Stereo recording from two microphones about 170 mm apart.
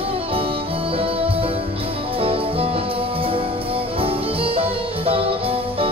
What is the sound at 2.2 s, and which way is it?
Music, 35° right (ahead or behind).